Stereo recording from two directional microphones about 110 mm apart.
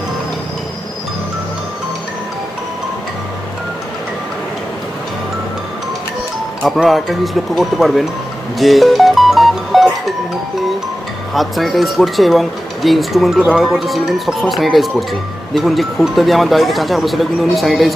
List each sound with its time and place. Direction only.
6.6 s speech: centre (ahead or behind)
8.5 s music: centre (ahead or behind)
11.3 s speech: centre (ahead or behind)